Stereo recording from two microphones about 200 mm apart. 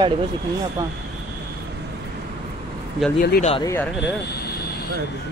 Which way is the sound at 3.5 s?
15° left (ahead or behind).